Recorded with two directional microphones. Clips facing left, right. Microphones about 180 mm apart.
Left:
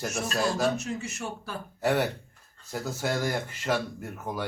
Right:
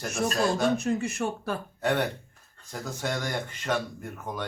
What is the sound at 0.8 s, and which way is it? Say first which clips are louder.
Speech: right 6 dB; 55° right (ahead or behind).